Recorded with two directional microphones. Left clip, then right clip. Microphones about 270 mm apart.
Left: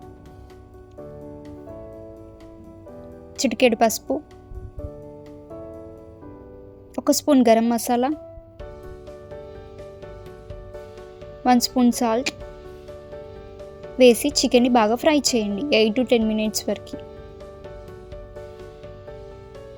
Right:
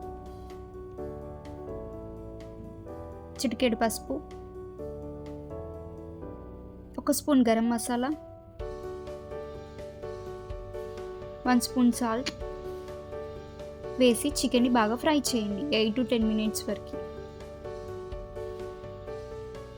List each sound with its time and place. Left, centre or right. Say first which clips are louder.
3.3 s a woman's voice: left 9 dB; left
6.9 s a woman's voice: left 7 dB; left
11.4 s a woman's voice: left 8 dB; left
14.0 s a woman's voice: left 9 dB; left